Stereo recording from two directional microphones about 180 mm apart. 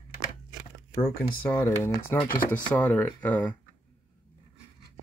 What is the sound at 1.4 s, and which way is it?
Speech, 15° left (ahead or behind).